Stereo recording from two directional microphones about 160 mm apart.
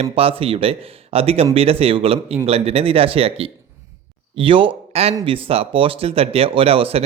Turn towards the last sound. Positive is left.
turn(degrees=-35)  # may be behind; listen again after turning